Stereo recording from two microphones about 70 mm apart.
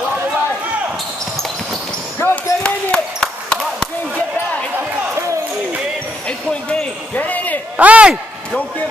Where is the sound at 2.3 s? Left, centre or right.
Centre.